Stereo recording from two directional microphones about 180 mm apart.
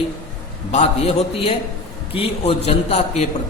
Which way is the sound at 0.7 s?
35° left (ahead or behind).